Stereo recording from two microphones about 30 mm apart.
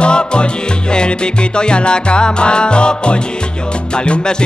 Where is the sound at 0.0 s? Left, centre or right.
Left.